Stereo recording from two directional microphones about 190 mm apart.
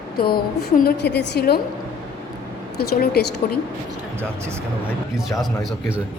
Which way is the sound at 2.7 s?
55° left (ahead or behind).